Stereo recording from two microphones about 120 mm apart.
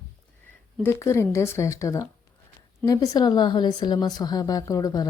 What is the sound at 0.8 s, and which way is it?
A woman's voice, 20° left (ahead or behind).